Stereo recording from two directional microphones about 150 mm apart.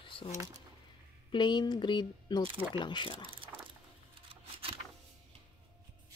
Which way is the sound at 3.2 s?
35° right (ahead or behind).